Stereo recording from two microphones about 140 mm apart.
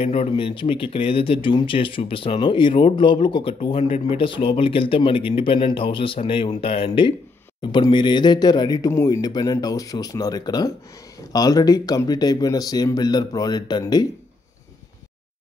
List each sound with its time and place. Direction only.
0.0 s speech: 45° left (ahead or behind)